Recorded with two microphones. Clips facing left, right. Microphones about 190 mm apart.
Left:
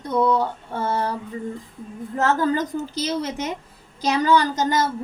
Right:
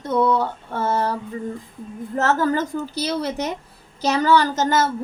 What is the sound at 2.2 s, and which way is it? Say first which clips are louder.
A woman's voice: right 1 dB; 15° left (ahead or behind).